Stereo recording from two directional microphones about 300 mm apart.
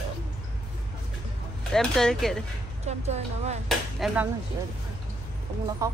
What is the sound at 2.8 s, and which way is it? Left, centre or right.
Speech, right.